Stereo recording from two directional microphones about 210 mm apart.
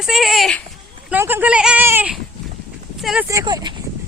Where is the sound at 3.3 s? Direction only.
15° right (ahead or behind).